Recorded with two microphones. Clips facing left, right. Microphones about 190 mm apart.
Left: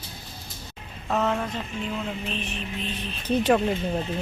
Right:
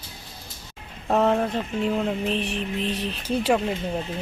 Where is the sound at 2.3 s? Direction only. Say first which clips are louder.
Right 6 dB; 75° right (ahead or behind).